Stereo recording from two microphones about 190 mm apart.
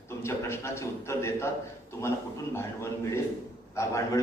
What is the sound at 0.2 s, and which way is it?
A man's voice, 15° left (ahead or behind).